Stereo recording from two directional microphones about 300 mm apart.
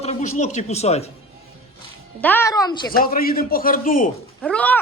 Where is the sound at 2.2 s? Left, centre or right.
Centre.